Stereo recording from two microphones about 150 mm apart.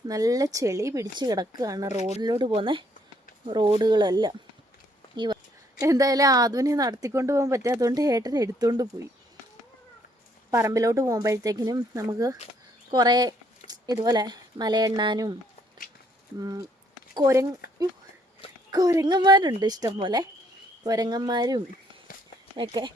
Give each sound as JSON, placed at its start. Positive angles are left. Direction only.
{"t": 0.1, "sound": "speech", "side_deg": -25}
{"t": 10.5, "sound": "speech", "side_deg": -20}
{"t": 16.4, "sound": "speech", "side_deg": -25}
{"t": 17.6, "sound": "a sound", "side_deg": 85}
{"t": 18.7, "sound": "speech", "side_deg": -25}